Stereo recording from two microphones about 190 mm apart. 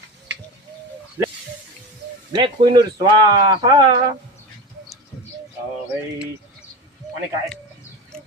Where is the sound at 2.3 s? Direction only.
25° right (ahead or behind).